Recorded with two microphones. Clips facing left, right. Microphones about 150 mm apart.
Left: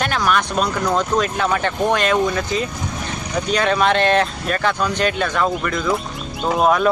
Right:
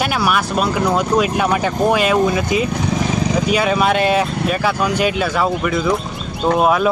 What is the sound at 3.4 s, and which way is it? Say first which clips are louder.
Speech: left 1 dB; 10° right (ahead or behind).